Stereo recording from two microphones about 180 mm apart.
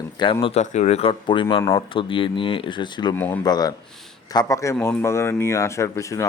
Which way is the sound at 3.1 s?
10° left (ahead or behind).